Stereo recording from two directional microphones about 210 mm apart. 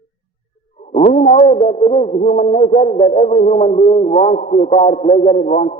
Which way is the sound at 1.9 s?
30° left (ahead or behind).